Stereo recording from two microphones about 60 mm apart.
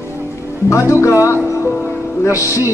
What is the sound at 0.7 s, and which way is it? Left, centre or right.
Speech, left.